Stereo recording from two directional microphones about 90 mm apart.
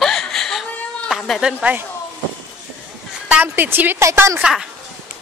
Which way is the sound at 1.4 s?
15° right (ahead or behind).